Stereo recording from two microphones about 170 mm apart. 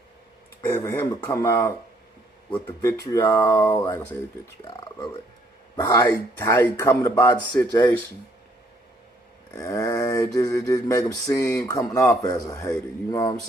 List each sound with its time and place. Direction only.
0.6 s speech: 15° left (ahead or behind)
3.1 s speech: 20° left (ahead or behind)
9.5 s a sound: 20° left (ahead or behind)
11.7 s speech: 20° left (ahead or behind)